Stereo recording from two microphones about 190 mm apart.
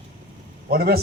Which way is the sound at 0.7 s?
50° right (ahead or behind).